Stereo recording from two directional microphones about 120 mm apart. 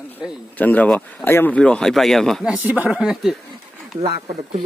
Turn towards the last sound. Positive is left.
turn(degrees=-60)  # may be behind; listen again after turning